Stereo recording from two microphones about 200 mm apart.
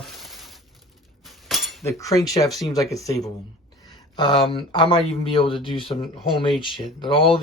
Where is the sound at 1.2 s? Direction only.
Centre (ahead or behind).